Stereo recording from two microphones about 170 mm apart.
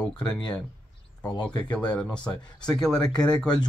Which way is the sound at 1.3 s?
25° left (ahead or behind).